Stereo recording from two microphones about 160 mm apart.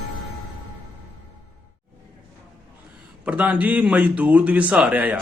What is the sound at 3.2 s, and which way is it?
Speech, 10° right (ahead or behind).